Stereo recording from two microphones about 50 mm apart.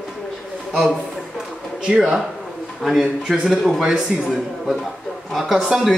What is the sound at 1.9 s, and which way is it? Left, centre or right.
A man's voice, centre.